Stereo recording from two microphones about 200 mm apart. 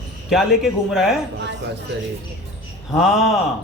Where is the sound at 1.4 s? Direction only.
60° right (ahead or behind).